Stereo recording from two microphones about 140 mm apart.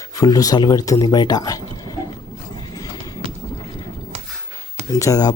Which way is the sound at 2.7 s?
25° left (ahead or behind).